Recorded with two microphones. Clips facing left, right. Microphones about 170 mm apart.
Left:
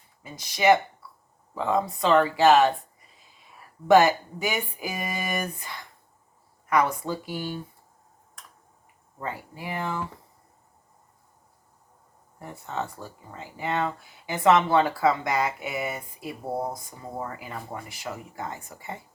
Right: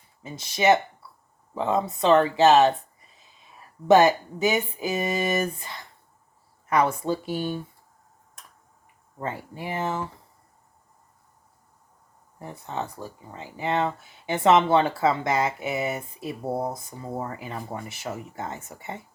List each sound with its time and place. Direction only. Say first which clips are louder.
0.2 s speech: right 1 dB; 25° right (ahead or behind)
3.8 s speech: right 1 dB; 20° right (ahead or behind)
9.2 s speech: right 2 dB; 25° right (ahead or behind)
12.4 s speech: even; 20° right (ahead or behind)